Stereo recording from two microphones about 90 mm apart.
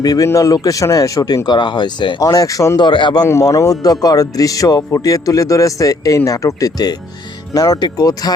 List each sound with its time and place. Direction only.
0.0 s speech: 45° left (ahead or behind)
1.5 s speech: 55° left (ahead or behind)
2.3 s speech: 40° left (ahead or behind)
2.8 s speech: 60° left (ahead or behind)
3.4 s speech: 40° left (ahead or behind)